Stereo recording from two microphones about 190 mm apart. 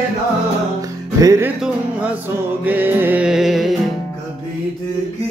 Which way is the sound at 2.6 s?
10° right (ahead or behind).